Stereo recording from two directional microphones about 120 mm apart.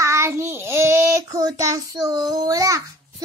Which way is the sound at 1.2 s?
30° right (ahead or behind).